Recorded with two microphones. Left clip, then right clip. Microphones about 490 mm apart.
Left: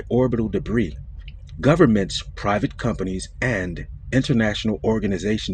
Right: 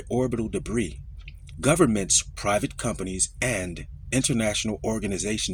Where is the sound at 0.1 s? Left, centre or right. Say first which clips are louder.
Left 6 dB; right.